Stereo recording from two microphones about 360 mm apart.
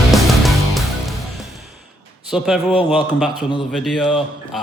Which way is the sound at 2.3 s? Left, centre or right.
Centre.